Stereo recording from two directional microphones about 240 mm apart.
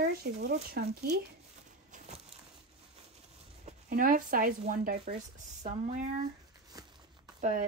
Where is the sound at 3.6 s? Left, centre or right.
Right.